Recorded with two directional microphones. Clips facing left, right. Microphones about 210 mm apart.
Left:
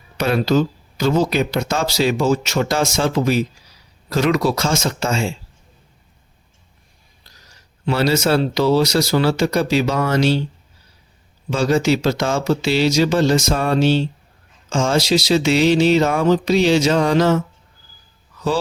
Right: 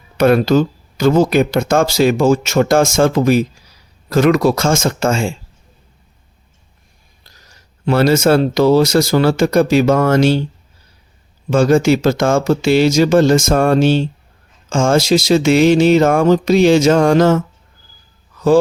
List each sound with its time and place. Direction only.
0.2 s speech: 50° right (ahead or behind)
7.9 s speech: 50° right (ahead or behind)
11.5 s speech: 50° right (ahead or behind)